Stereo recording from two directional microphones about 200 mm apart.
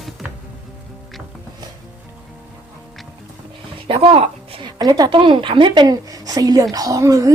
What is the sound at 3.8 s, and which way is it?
A woman's voice, 25° right (ahead or behind).